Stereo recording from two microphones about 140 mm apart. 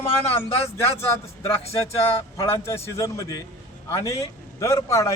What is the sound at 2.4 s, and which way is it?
A man's voice, 20° left (ahead or behind).